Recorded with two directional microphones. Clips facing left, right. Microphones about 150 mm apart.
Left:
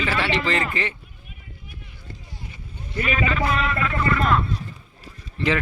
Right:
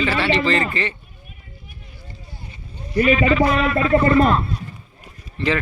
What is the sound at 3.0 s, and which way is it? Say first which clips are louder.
A man's voice: right 8 dB; 30° right (ahead or behind).